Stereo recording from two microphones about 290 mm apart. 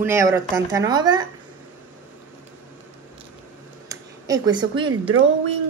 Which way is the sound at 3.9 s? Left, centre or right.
Centre.